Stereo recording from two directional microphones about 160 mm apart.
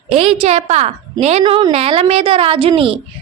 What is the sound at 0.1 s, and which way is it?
A woman's voice, 40° right (ahead or behind).